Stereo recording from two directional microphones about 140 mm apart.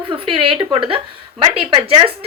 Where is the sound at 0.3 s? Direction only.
35° right (ahead or behind).